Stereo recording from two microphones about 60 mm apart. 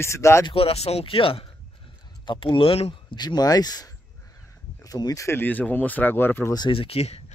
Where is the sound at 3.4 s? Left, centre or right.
Left.